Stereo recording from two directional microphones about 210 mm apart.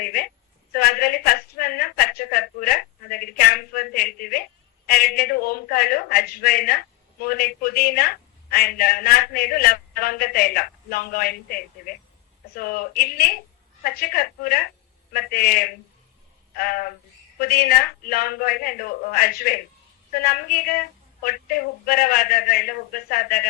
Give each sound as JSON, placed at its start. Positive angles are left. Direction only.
{"t": 0.0, "sound": "a woman's voice", "side_deg": 45}
{"t": 12.5, "sound": "a man's voice", "side_deg": 45}